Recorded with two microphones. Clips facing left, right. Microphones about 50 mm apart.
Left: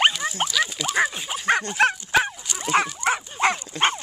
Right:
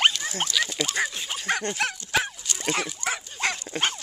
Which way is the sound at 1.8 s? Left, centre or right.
Left.